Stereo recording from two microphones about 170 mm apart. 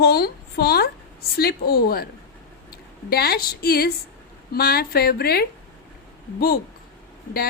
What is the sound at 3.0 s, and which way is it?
Speech, 65° left (ahead or behind).